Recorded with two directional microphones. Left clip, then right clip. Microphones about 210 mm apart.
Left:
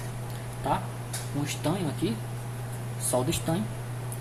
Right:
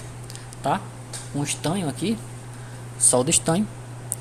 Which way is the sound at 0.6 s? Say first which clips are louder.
Right 4 dB; 50° right (ahead or behind).